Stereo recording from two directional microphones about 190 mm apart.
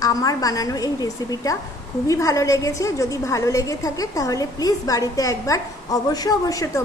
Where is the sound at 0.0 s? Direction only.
20° left (ahead or behind).